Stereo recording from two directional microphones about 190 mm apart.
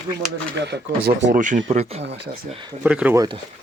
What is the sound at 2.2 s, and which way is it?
Speech, 50° right (ahead or behind).